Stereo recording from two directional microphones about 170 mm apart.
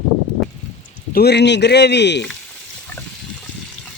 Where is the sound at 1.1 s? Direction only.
75° left (ahead or behind).